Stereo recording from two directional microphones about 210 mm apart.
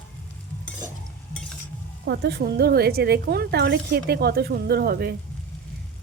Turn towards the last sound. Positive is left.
turn(degrees=-45)  # may be behind; listen again after turning